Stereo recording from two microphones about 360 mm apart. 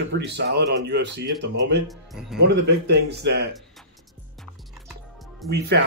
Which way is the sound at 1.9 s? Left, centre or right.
Centre.